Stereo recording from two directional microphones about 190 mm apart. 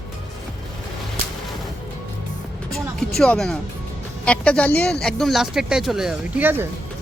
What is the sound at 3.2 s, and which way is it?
Speech, 5° left (ahead or behind).